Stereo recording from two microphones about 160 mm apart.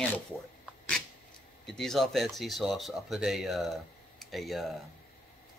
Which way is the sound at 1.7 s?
Centre (ahead or behind).